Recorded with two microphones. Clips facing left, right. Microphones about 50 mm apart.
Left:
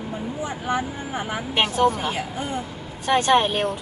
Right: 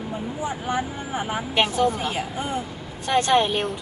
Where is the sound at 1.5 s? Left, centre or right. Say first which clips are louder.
Left 1 dB; left.